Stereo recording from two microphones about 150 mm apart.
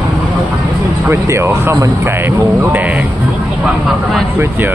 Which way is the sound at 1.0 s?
20° right (ahead or behind).